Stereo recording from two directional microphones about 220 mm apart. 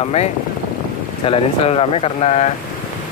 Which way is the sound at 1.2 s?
25° left (ahead or behind).